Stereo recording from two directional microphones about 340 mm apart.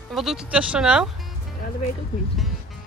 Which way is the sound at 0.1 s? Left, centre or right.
Centre.